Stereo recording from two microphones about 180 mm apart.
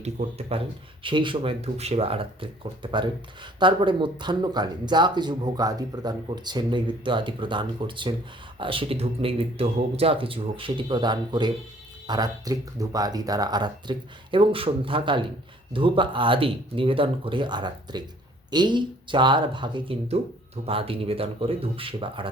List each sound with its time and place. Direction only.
0.0 s speech: 35° right (ahead or behind)